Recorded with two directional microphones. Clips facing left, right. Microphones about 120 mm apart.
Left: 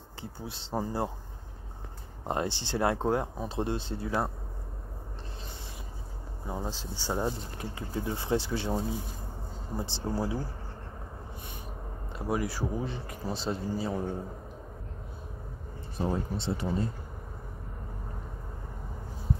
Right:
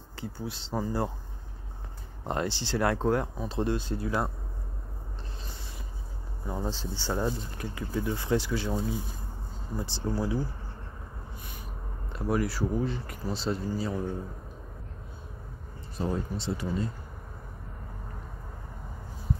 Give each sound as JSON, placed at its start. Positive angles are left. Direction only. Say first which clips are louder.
{"t": 0.2, "sound": "speech", "louder": "right 4 dB", "side_deg": 20}
{"t": 2.2, "sound": "speech", "louder": "even", "side_deg": 20}
{"t": 6.4, "sound": "speech", "louder": "right 3 dB", "side_deg": 10}
{"t": 12.2, "sound": "speech", "louder": "right 3 dB", "side_deg": 20}
{"t": 16.1, "sound": "speech", "louder": "even", "side_deg": 25}